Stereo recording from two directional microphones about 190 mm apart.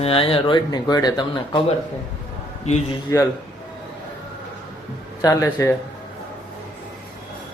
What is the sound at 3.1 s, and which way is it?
Speech, 15° left (ahead or behind).